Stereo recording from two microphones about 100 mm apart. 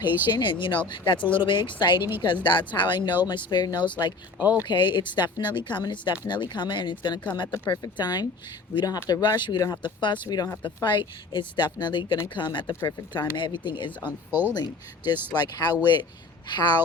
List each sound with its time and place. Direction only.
0.0 s speech: 20° right (ahead or behind)
0.3 s speech: 50° left (ahead or behind)
2.0 s speech: 20° right (ahead or behind)
2.2 s speech: 50° left (ahead or behind)
4.4 s speech: 15° right (ahead or behind)
4.6 s speech: 50° left (ahead or behind)
10.2 s speech: 40° left (ahead or behind)
14.0 s speech: 20° right (ahead or behind)
15.4 s speech: 45° left (ahead or behind)